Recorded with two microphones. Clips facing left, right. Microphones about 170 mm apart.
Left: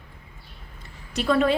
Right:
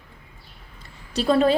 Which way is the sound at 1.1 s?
30° right (ahead or behind).